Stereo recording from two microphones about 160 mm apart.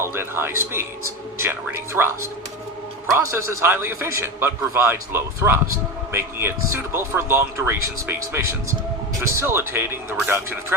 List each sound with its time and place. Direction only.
0.0 s a man's voice: 15° right (ahead or behind)